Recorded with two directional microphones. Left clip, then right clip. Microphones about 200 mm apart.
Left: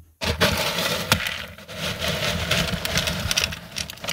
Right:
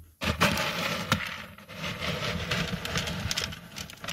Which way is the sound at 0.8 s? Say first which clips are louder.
Left 7 dB; 35° left (ahead or behind).